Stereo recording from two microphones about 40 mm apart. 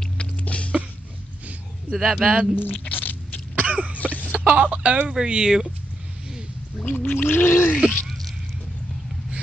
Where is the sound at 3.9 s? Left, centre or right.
Left.